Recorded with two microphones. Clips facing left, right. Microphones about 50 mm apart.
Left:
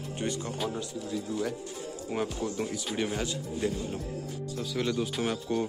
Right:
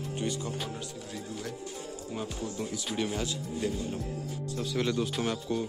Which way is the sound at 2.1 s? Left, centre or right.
Left.